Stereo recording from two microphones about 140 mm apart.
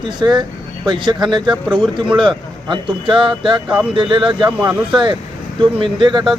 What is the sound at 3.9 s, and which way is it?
Speech, 35° right (ahead or behind).